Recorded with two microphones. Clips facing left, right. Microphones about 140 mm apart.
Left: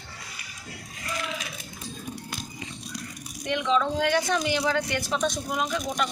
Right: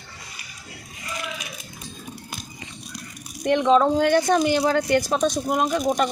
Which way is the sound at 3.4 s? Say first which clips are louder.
Right 8 dB; 50° right (ahead or behind).